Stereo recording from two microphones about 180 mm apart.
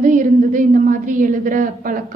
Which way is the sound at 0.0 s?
45° right (ahead or behind).